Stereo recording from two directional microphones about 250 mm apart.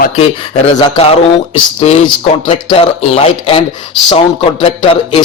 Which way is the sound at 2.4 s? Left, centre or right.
Left.